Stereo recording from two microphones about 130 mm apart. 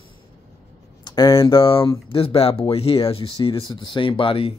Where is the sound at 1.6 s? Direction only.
45° left (ahead or behind).